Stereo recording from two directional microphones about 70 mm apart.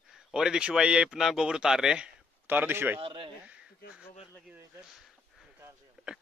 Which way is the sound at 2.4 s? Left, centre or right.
Right.